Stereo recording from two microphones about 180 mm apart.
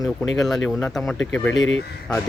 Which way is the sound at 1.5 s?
90° left.